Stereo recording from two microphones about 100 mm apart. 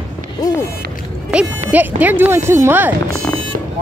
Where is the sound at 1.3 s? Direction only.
15° right (ahead or behind).